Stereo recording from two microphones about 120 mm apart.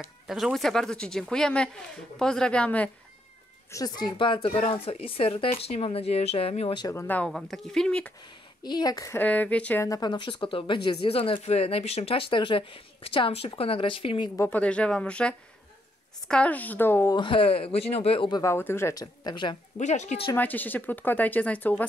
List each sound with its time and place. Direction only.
0.3 s speech: centre (ahead or behind)
3.7 s speech: 35° left (ahead or behind); by 6.8 s 55° left (ahead or behind)
6.8 s speech: 25° left (ahead or behind)
7.1 s speech: 10° left (ahead or behind)
8.6 s a woman's voice: 35° left (ahead or behind)
9.2 s speech: 15° left (ahead or behind)
9.8 s speech: 35° left (ahead or behind)
14.3 s speech: 20° left (ahead or behind)
14.6 s speech: 10° left (ahead or behind)
17.1 s speech: 45° left (ahead or behind)
18.3 s speech: 25° left (ahead or behind)
19.2 s speech: 40° left (ahead or behind)
19.8 s speech: 75° left (ahead or behind)
20.3 s speech: 15° left (ahead or behind)